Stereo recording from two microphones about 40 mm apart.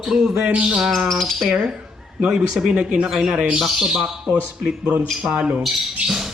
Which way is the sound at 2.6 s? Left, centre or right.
Centre.